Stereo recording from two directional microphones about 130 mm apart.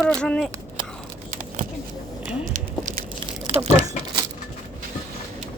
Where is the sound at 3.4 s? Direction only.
50° right (ahead or behind).